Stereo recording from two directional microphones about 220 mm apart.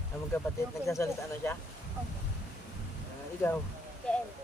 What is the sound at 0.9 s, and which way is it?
Speech, 15° left (ahead or behind).